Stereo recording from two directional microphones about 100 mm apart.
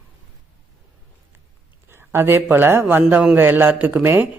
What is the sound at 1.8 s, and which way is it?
A man's voice, 25° right (ahead or behind).